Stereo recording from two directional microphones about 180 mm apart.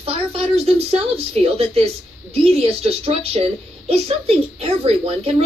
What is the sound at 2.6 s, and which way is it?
Speech, 35° right (ahead or behind).